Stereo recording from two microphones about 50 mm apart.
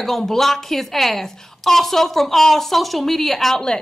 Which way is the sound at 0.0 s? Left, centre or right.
Centre.